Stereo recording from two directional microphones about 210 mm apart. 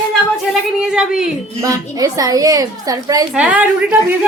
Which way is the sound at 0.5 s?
5° right (ahead or behind).